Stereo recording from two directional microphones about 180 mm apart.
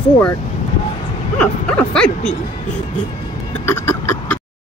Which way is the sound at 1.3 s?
5° left (ahead or behind).